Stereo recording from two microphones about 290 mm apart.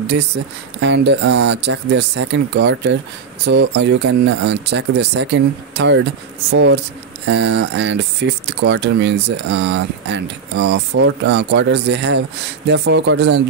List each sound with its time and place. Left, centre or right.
0.7 s speech: right